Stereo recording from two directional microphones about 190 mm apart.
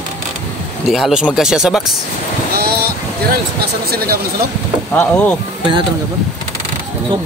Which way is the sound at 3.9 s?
55° right (ahead or behind).